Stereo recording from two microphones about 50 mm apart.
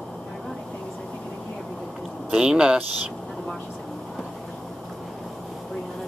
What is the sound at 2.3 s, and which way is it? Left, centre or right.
Speech, centre.